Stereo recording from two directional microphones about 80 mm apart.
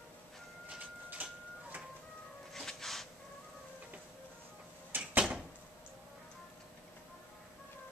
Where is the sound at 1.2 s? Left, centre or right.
Right.